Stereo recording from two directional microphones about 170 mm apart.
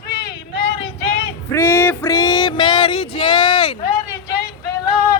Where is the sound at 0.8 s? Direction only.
90° left.